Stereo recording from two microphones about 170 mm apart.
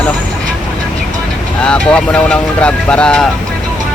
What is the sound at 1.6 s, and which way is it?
Speech, 5° left (ahead or behind).